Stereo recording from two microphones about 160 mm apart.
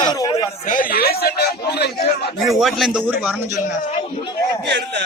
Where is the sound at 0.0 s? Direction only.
25° left (ahead or behind).